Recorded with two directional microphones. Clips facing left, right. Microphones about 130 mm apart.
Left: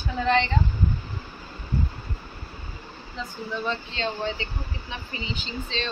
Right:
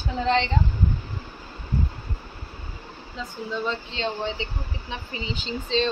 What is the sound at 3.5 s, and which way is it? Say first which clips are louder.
Speech: right 1 dB; 20° right (ahead or behind).